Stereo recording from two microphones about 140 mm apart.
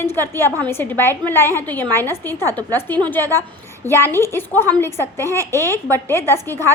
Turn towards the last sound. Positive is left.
turn(degrees=20)  # may be behind; listen again after turning